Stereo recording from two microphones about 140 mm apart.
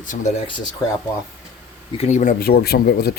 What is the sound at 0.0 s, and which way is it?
Speech, 65° left (ahead or behind).